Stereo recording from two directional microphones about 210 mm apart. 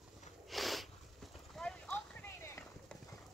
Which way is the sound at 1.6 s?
5° left (ahead or behind).